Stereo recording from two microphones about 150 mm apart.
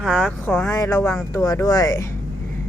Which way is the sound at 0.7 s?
20° left (ahead or behind).